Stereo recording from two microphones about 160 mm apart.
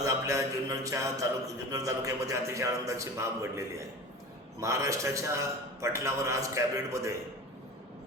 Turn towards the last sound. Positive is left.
turn(degrees=-20)  # may be behind; listen again after turning